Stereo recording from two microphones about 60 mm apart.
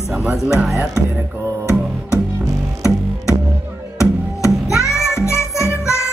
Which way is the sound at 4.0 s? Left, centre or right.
Left.